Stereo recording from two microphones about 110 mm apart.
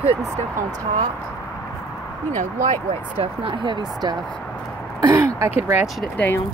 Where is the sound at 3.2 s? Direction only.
45° right (ahead or behind).